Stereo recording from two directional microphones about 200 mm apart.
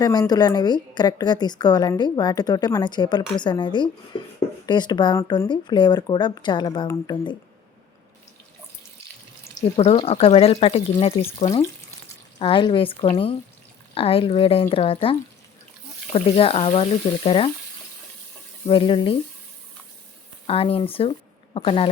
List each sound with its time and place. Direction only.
0.0 s a woman's voice: 20° left (ahead or behind)
4.1 s a sound: 25° left (ahead or behind)
4.6 s a woman's voice: 20° left (ahead or behind)
9.7 s a woman's voice: 25° left (ahead or behind)
16.1 s a woman's voice: 30° left (ahead or behind)
18.6 s a woman's voice: 25° left (ahead or behind)
20.5 s speech: 30° left (ahead or behind)